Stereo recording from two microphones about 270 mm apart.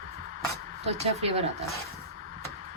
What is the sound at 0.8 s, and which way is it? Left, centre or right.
Speech, right.